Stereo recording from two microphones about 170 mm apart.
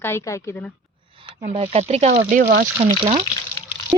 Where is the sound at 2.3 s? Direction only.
60° right (ahead or behind).